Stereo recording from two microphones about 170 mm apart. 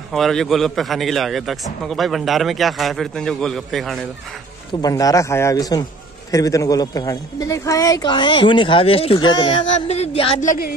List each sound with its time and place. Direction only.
0.1 s a man's voice: centre (ahead or behind)
4.8 s a woman's voice: 20° left (ahead or behind)
9.8 s music: 40° left (ahead or behind)
10.4 s music: 50° left (ahead or behind)